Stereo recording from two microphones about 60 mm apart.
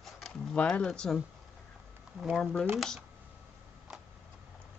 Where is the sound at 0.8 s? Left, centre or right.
Centre.